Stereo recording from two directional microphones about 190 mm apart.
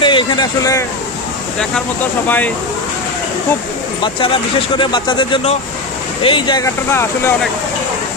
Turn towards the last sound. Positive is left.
turn(degrees=15)  # may be behind; listen again after turning